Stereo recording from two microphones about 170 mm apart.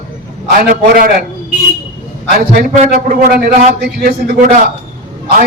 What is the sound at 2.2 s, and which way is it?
A man's voice, 65° right (ahead or behind).